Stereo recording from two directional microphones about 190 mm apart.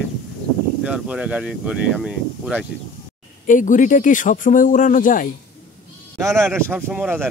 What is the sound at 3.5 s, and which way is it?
Speech, 40° left (ahead or behind).